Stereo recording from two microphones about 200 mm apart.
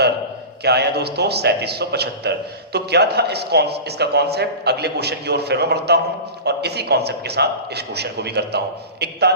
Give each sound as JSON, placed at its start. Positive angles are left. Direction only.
{"t": 0.6, "sound": "a man's voice", "side_deg": -55}